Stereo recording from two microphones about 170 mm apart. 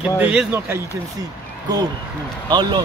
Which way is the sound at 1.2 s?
25° right (ahead or behind).